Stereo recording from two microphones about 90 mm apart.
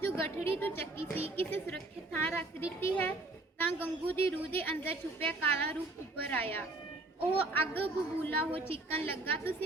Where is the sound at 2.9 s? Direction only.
25° left (ahead or behind).